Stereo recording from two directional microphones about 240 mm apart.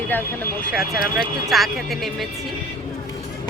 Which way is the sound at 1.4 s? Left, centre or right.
Centre.